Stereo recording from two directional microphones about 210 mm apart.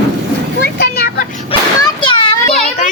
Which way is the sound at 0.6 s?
50° left (ahead or behind).